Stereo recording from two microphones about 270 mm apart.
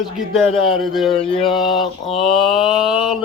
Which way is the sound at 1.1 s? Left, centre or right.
Left.